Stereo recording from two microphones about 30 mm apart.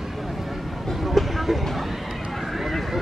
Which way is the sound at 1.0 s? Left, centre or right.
Centre.